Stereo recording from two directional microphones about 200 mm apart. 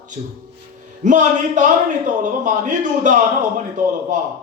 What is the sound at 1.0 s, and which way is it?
A man's voice, 40° right (ahead or behind).